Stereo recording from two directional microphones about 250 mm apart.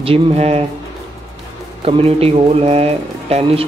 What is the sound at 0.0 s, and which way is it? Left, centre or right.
Speech, right.